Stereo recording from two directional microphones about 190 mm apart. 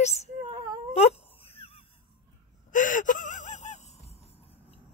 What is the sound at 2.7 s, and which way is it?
Gasp, 45° left (ahead or behind).